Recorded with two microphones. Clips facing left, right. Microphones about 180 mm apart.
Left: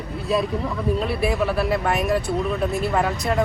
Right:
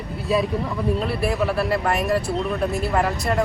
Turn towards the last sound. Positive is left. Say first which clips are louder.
# even
turn(degrees=0)  # may be behind; listen again after turning